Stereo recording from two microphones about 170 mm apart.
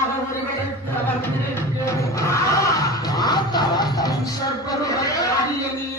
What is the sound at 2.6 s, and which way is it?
Music, 20° left (ahead or behind).